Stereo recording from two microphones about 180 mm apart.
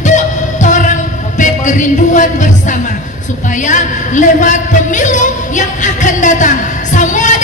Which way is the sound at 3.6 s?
45° left (ahead or behind).